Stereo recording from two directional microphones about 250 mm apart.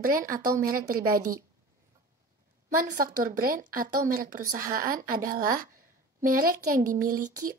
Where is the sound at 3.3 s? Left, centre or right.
Right.